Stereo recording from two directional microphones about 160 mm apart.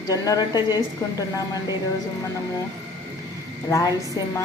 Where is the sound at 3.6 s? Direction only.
20° left (ahead or behind).